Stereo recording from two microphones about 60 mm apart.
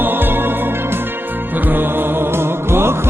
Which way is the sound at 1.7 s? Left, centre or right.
Right.